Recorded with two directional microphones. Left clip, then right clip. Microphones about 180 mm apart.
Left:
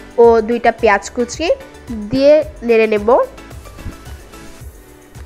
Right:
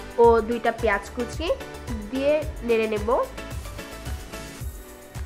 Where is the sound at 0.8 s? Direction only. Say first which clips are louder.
Left 11 dB; 35° left (ahead or behind).